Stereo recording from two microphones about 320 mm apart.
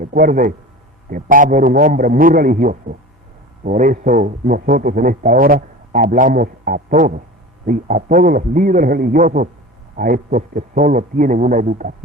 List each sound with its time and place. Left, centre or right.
0.0 s a man's voice: right